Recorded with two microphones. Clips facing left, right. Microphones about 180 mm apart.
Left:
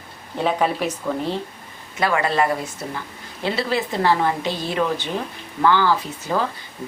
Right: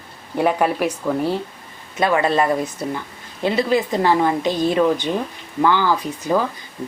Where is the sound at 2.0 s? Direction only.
20° right (ahead or behind).